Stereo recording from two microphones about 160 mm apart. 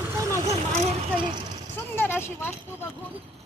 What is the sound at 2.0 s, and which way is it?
Speech, 15° left (ahead or behind).